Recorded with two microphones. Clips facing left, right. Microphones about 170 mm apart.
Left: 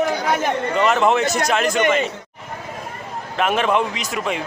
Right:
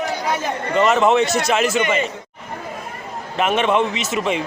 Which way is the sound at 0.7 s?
Centre (ahead or behind).